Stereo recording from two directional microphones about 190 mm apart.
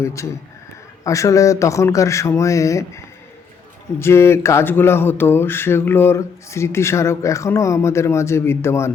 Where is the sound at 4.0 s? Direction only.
15° left (ahead or behind).